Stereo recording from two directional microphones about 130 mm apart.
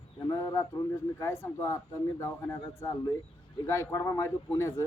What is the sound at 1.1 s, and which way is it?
Speech, 20° left (ahead or behind).